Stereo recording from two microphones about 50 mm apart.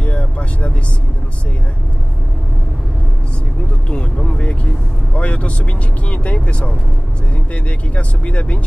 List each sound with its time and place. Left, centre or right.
0.0 s vehicle: left
3.9 s a sound: centre
5.1 s vehicle: left
7.5 s speech: left